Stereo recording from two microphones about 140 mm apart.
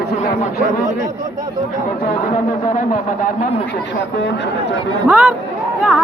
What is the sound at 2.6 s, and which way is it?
Speech, 75° left (ahead or behind).